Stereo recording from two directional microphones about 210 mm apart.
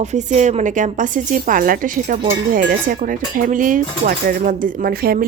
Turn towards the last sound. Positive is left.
turn(degrees=-45)  # may be behind; listen again after turning